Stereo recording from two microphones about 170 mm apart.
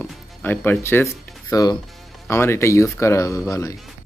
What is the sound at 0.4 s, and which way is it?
Speech, 10° left (ahead or behind).